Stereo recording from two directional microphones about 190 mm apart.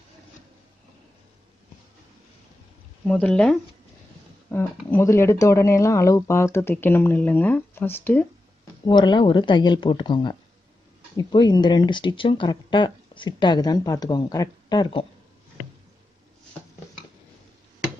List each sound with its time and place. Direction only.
3.1 s speech: 5° left (ahead or behind)
8.8 s speech: 25° left (ahead or behind)